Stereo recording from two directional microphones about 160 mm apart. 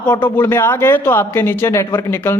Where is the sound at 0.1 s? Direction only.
15° left (ahead or behind).